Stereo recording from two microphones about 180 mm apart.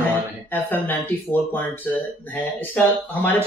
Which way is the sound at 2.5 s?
10° left (ahead or behind).